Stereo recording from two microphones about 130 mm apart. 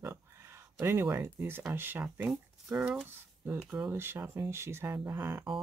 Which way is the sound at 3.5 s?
20° right (ahead or behind).